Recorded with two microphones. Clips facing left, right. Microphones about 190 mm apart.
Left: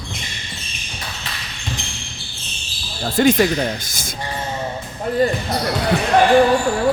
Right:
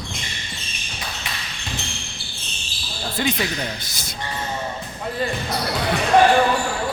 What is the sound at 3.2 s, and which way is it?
Speech, 50° left (ahead or behind).